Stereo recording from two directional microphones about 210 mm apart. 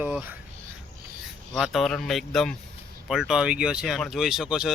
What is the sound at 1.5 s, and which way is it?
Speech, centre (ahead or behind).